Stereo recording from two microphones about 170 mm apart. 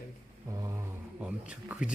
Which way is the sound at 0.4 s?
20° right (ahead or behind).